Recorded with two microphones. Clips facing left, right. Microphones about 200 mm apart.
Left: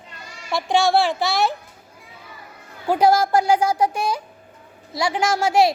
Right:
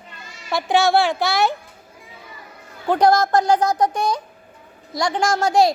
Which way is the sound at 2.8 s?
10° left (ahead or behind).